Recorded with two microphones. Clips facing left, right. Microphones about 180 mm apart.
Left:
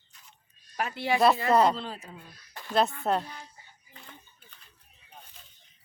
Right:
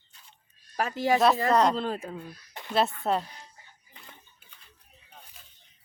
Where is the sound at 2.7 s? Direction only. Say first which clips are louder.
Even; centre (ahead or behind).